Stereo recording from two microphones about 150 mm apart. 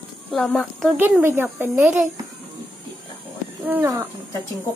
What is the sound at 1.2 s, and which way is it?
Speech, 15° right (ahead or behind).